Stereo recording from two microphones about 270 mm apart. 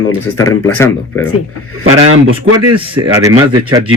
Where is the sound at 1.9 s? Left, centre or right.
Right.